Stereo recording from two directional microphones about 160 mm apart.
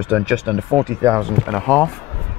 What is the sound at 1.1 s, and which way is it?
Speech, 5° left (ahead or behind).